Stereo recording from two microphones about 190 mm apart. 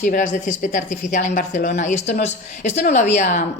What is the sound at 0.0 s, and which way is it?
A woman's voice, 40° left (ahead or behind).